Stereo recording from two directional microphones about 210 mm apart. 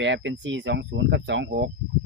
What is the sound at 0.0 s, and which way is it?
Speech, 60° right (ahead or behind).